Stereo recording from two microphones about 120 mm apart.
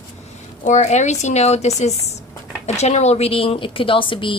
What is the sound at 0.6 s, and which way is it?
A woman's voice, 75° left (ahead or behind).